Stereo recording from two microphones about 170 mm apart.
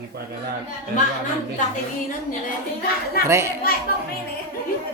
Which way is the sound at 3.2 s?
15° right (ahead or behind).